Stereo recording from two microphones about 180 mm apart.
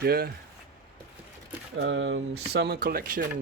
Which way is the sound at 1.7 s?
90° right.